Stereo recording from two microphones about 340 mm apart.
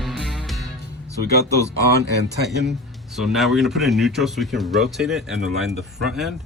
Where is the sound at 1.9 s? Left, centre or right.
Right.